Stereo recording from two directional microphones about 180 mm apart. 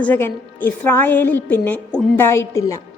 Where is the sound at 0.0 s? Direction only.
10° left (ahead or behind).